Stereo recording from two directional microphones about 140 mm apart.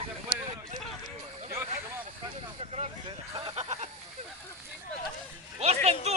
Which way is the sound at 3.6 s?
55° right (ahead or behind).